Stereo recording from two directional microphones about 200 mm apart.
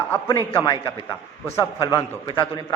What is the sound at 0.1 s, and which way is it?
A man's voice, 15° left (ahead or behind).